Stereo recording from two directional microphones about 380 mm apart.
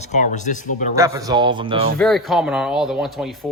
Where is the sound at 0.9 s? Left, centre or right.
Centre.